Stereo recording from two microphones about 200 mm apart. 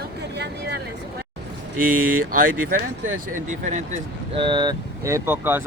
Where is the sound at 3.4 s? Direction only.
35° right (ahead or behind).